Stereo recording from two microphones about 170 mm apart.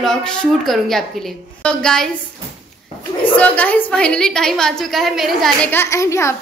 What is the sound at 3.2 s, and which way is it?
A woman's voice, 10° left (ahead or behind).